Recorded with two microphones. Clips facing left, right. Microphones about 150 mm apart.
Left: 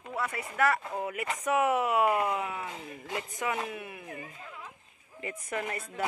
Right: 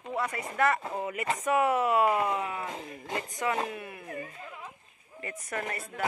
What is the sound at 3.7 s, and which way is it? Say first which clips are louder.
Speech: even; 5° left (ahead or behind).